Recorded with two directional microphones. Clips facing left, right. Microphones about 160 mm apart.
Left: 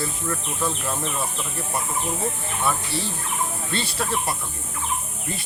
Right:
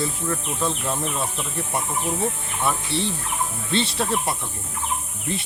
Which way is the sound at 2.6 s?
25° right (ahead or behind).